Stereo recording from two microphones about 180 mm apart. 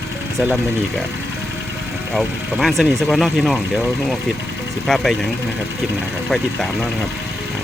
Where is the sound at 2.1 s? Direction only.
Centre (ahead or behind).